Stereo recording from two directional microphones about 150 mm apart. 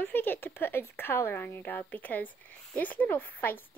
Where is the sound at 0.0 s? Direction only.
15° left (ahead or behind).